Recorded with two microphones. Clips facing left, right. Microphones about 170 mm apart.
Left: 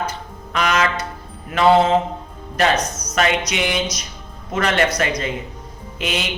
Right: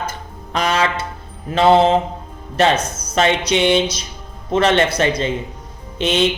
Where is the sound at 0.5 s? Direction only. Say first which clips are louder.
Right 1 dB; 30° right (ahead or behind).